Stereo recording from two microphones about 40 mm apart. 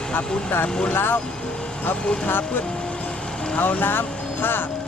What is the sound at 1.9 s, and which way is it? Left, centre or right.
Speech, left.